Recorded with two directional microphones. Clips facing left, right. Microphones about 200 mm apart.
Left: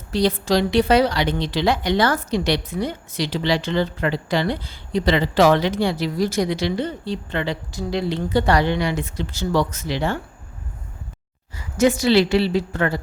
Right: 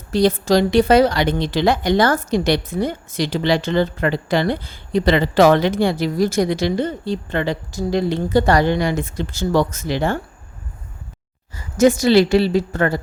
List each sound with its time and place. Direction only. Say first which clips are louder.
0.1 s a woman's voice: right 4 dB; 45° right (ahead or behind)
11.5 s a woman's voice: right 4 dB; 45° right (ahead or behind)